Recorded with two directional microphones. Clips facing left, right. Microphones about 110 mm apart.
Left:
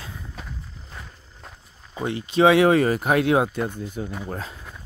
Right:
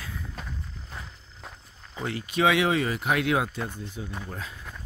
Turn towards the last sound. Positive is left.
turn(degrees=40)  # may be behind; listen again after turning